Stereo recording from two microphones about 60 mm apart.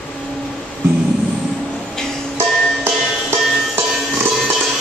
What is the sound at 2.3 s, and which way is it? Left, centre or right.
Music, right.